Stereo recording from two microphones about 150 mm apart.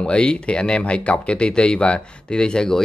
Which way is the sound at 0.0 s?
5° left (ahead or behind).